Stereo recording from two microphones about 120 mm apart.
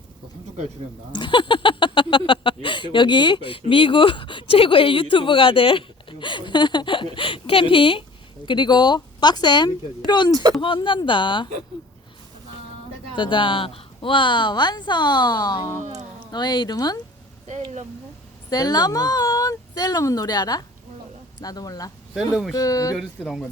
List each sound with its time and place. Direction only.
1.1 s a woman's voice: 40° left (ahead or behind)
13.1 s a woman's voice: 40° left (ahead or behind)
17.4 s speech: 75° right (ahead or behind)
18.5 s a woman's voice: 35° left (ahead or behind)
22.3 s speech: 5° right (ahead or behind)
22.5 s speech: 30° left (ahead or behind)
23.0 s speech: centre (ahead or behind)